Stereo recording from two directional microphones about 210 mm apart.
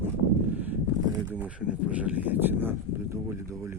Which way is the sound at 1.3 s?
5° right (ahead or behind).